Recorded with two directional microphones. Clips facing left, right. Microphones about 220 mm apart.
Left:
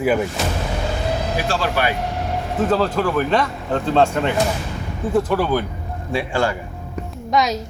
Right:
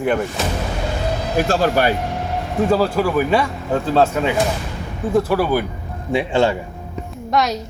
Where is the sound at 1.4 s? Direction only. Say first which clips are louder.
Right 5 dB; 45° right (ahead or behind).